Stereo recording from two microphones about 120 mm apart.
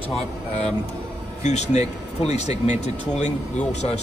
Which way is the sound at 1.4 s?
70° left (ahead or behind).